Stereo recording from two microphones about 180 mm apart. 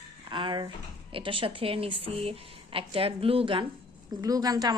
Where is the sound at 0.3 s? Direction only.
25° right (ahead or behind).